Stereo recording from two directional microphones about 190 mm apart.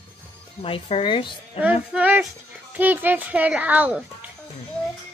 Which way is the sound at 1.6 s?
5° right (ahead or behind).